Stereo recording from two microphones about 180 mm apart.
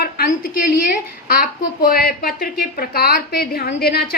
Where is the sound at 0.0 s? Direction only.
50° left (ahead or behind).